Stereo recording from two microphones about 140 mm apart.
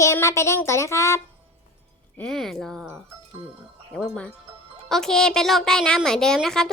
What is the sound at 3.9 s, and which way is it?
A woman's voice, 10° left (ahead or behind).